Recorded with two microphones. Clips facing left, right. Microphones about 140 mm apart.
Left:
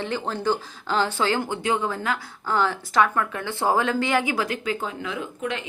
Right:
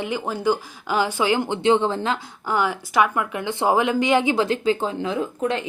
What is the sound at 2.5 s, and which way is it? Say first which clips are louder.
A woman's voice: right 1 dB; 15° right (ahead or behind).